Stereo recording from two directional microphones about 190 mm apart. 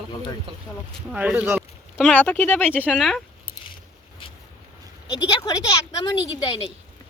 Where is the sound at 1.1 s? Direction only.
5° right (ahead or behind).